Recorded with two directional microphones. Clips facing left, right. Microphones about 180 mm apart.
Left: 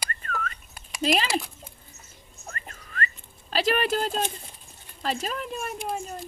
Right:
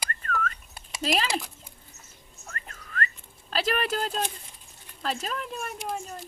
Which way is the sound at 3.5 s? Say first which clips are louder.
Left 3 dB; 5° left (ahead or behind).